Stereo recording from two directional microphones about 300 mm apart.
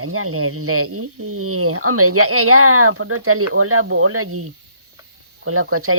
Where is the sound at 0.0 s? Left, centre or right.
Right.